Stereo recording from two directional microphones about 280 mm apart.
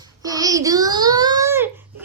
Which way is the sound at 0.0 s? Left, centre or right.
Centre.